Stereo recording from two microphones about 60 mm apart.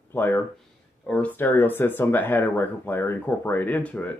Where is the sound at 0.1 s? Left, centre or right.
Left.